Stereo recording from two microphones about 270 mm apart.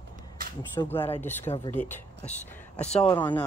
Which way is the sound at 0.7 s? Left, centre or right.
Centre.